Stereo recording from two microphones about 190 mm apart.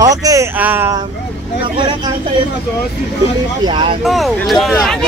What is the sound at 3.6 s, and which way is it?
Speech, 25° right (ahead or behind).